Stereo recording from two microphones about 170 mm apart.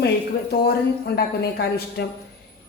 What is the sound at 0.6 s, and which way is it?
A woman's voice, 70° left (ahead or behind).